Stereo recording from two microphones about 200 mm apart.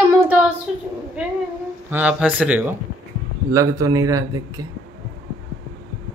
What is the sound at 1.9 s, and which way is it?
Speech, 5° right (ahead or behind).